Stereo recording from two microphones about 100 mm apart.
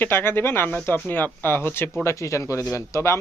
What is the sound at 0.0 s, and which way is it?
Speech, 20° left (ahead or behind).